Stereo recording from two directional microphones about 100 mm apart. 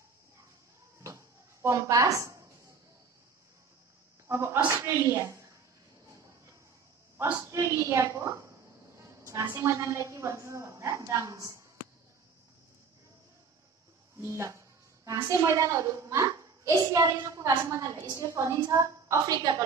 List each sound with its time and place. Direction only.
1.0 s a sound: 30° right (ahead or behind)
4.3 s a woman's voice: 25° right (ahead or behind)
7.5 s a woman's voice: 30° right (ahead or behind)
14.1 s a child's voice: 25° right (ahead or behind)